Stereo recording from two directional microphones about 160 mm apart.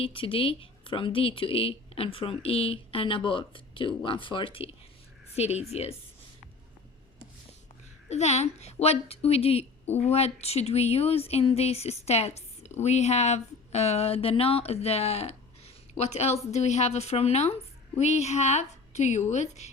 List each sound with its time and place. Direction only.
0.0 s a woman's voice: 35° left (ahead or behind)
8.1 s a woman's voice: 45° left (ahead or behind)